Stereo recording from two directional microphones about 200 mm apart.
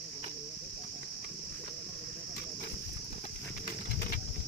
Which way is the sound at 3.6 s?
50° left (ahead or behind).